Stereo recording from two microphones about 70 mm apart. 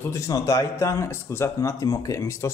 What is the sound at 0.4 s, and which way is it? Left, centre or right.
Speech, left.